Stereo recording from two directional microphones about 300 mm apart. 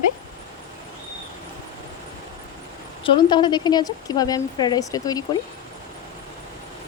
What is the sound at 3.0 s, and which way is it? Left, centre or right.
A woman's voice, centre.